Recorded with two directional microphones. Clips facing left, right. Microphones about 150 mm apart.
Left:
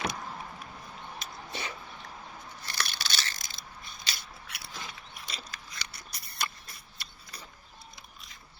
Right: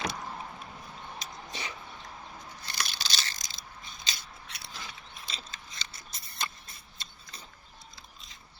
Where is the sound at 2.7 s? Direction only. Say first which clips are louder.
Left 1 dB; 20° right (ahead or behind).